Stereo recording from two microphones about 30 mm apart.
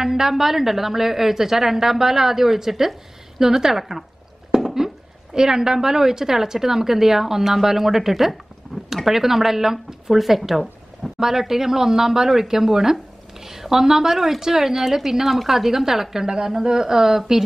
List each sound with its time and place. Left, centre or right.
0.0 s a woman's voice: centre